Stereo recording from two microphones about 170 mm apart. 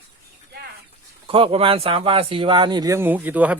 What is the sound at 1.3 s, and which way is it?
Speech, 35° right (ahead or behind).